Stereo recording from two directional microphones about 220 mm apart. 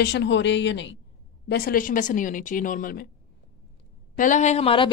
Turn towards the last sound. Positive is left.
turn(degrees=25)  # may be behind; listen again after turning